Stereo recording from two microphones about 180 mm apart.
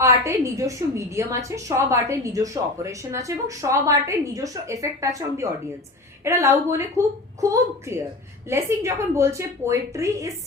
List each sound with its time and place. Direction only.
0.0 s a woman's voice: 15° right (ahead or behind)